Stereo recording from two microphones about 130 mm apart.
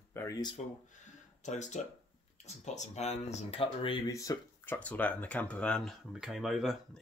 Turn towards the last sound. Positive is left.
turn(degrees=0)  # may be behind; listen again after turning